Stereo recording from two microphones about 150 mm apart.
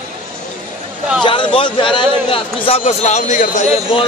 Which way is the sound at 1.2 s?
35° left (ahead or behind).